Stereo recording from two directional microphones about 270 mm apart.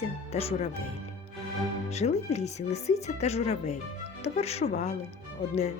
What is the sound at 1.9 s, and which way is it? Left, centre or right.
Speech, left.